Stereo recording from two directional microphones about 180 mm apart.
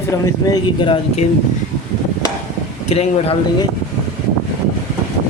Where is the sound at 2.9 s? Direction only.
35° left (ahead or behind).